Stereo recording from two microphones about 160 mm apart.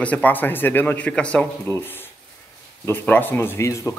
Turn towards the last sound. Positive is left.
turn(degrees=20)  # may be behind; listen again after turning